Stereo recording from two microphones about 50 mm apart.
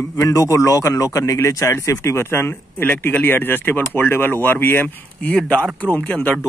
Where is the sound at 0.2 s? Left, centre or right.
Left.